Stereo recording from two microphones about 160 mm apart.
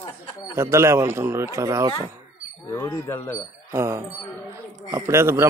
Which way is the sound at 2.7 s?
15° left (ahead or behind).